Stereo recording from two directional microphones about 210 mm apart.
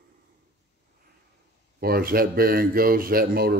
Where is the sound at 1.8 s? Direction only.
45° right (ahead or behind).